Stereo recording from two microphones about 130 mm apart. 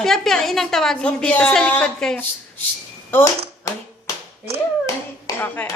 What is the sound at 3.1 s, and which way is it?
Tap, 20° left (ahead or behind).